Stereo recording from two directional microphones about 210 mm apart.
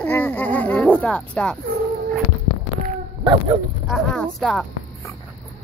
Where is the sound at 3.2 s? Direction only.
20° right (ahead or behind).